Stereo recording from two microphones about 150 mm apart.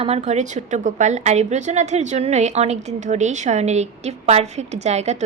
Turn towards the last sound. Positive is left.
turn(degrees=-50)  # may be behind; listen again after turning